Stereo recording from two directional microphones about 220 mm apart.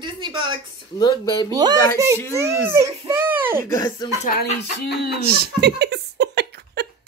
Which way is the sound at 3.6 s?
15° left (ahead or behind).